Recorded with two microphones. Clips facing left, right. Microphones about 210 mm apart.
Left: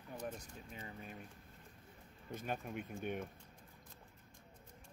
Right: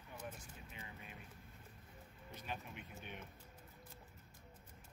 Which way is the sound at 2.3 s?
50° left (ahead or behind).